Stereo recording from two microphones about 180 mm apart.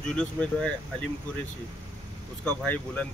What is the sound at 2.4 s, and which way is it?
Speech, 5° left (ahead or behind).